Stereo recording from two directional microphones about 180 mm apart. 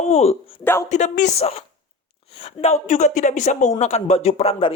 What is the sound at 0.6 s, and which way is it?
Speech, 15° left (ahead or behind).